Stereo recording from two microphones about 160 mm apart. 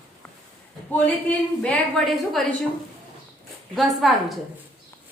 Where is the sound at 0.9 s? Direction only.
10° left (ahead or behind).